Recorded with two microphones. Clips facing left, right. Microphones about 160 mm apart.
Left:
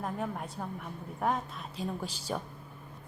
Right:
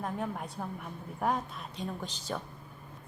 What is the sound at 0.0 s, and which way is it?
Speech, centre (ahead or behind).